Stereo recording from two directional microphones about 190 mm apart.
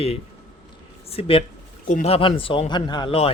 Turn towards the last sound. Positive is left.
turn(degrees=30)  # may be behind; listen again after turning